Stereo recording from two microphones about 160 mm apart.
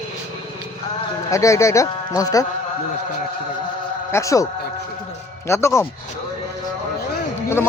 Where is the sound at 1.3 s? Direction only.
20° left (ahead or behind).